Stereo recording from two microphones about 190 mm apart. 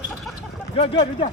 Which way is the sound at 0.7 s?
30° left (ahead or behind).